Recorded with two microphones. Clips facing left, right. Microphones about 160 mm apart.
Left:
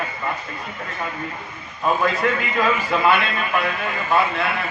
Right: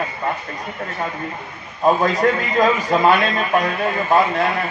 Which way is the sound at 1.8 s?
40° right (ahead or behind).